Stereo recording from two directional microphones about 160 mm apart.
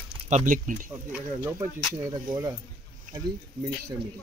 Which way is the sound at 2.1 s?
20° right (ahead or behind).